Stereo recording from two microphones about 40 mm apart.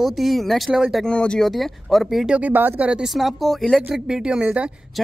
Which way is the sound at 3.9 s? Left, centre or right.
Centre.